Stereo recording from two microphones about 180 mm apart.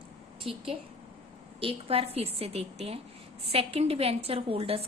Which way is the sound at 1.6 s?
30° right (ahead or behind).